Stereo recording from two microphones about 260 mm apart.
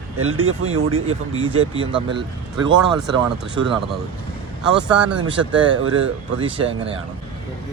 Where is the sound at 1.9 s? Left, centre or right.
Centre.